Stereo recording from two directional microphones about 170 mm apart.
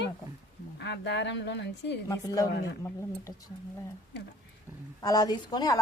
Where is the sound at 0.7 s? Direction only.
90° left.